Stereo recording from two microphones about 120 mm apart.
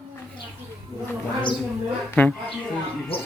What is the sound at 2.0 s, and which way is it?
Speech, 15° left (ahead or behind).